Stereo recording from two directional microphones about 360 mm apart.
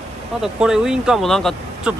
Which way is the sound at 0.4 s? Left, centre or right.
Centre.